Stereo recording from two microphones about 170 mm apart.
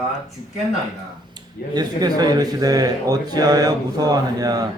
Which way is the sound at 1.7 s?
25° right (ahead or behind).